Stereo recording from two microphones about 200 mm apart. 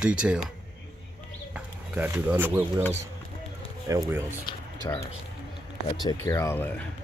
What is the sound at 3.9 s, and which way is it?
Speech, 15° right (ahead or behind).